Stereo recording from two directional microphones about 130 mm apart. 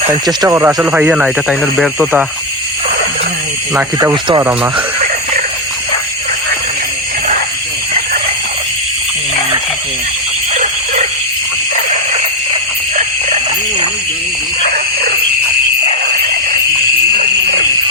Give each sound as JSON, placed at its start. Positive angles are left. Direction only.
{"t": 0.4, "sound": "speech", "side_deg": -20}
{"t": 0.9, "sound": "speech", "side_deg": -10}
{"t": 4.1, "sound": "speech", "side_deg": -40}
{"t": 10.5, "sound": "dog", "side_deg": -65}
{"t": 13.0, "sound": "a sound", "side_deg": -65}